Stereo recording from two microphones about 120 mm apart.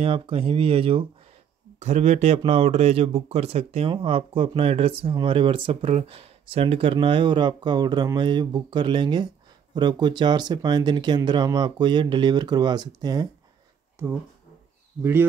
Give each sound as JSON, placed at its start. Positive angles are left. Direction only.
{"t": 0.0, "sound": "speech", "side_deg": -50}
{"t": 1.8, "sound": "speech", "side_deg": -65}
{"t": 3.9, "sound": "speech", "side_deg": -45}
{"t": 13.9, "sound": "speech", "side_deg": -20}